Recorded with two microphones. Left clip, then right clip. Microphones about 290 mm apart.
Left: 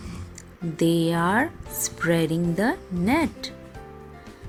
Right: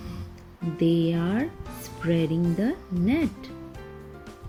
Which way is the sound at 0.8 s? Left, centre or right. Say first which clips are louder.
Left 2 dB; left.